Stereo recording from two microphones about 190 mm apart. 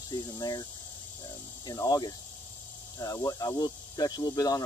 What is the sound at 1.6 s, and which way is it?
Speech, 20° left (ahead or behind).